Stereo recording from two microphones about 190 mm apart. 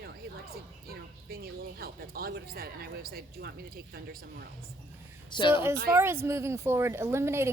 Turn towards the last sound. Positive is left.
turn(degrees=-15)  # may be behind; listen again after turning